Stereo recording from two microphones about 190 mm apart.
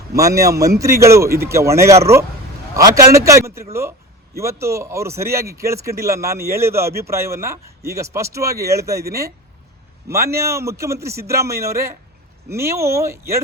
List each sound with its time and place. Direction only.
0.2 s speech: 15° right (ahead or behind)
10.1 s speech: 15° right (ahead or behind)